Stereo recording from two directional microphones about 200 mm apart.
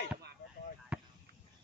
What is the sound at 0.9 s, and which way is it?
Chop, 5° right (ahead or behind).